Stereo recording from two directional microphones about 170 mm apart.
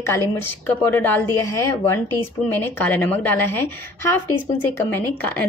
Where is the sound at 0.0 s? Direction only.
15° left (ahead or behind).